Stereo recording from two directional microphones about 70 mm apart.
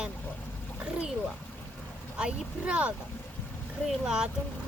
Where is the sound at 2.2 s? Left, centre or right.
Centre.